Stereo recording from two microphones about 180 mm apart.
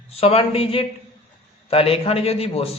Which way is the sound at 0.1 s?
35° left (ahead or behind).